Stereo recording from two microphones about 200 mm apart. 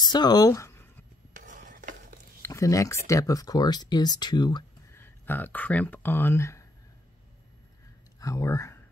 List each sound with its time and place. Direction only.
0.0 s a sound: 20° left (ahead or behind)
1.3 s stir: 40° right (ahead or behind)
2.4 s speech: 15° left (ahead or behind)
5.0 s speech: 10° left (ahead or behind)
8.2 s speech: 15° left (ahead or behind)